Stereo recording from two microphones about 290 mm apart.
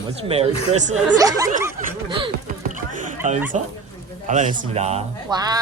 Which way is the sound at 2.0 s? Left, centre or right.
Centre.